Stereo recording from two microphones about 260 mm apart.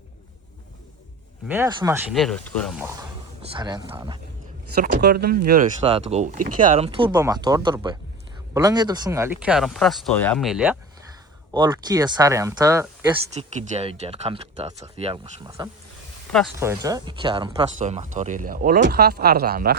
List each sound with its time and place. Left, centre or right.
1.5 s speech: centre
2.1 s speech: centre
3.5 s speech: centre
4.7 s speech: right; by 10.8 s centre
11.5 s speech: centre
13.3 s speech: right